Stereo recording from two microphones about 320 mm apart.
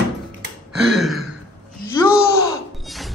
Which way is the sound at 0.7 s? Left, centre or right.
Centre.